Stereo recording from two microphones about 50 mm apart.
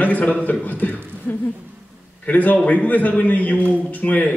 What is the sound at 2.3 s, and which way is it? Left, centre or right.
A man's voice, left.